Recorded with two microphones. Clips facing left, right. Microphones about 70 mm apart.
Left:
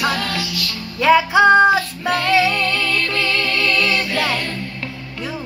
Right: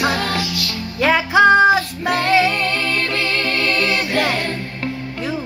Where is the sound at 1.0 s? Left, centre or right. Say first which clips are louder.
Left 1 dB; centre.